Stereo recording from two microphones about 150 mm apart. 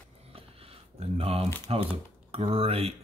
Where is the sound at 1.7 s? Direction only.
45° right (ahead or behind).